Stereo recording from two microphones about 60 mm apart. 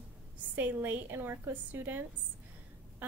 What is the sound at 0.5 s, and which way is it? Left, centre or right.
A woman's voice, right.